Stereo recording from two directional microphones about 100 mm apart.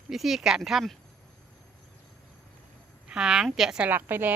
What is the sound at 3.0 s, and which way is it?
Speech, 5° right (ahead or behind).